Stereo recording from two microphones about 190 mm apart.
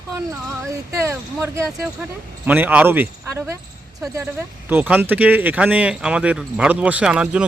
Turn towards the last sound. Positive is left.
turn(degrees=-5)  # may be behind; listen again after turning